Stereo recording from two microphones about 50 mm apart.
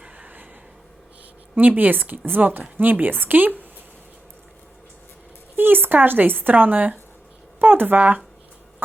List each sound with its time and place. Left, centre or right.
1.5 s a woman's voice: right
5.5 s a woman's voice: right